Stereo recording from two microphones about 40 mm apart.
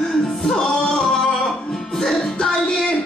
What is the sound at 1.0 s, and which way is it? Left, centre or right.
Music, centre.